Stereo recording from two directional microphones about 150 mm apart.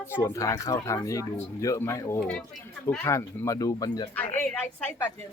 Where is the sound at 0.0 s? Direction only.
15° left (ahead or behind).